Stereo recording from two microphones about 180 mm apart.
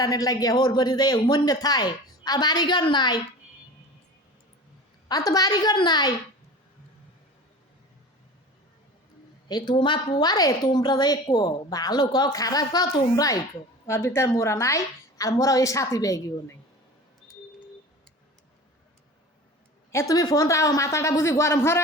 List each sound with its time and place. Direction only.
0.0 s a woman's voice: 20° left (ahead or behind)
5.0 s a woman's voice: 20° left (ahead or behind)
9.5 s a woman's voice: 25° left (ahead or behind)
19.9 s speech: 15° left (ahead or behind)